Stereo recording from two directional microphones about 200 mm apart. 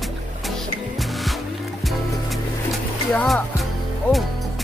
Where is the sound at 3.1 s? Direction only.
Centre (ahead or behind).